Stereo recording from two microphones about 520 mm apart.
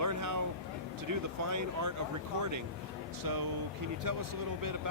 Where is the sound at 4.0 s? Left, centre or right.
Right.